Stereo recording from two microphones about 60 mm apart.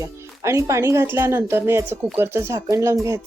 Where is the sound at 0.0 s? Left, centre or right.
Right.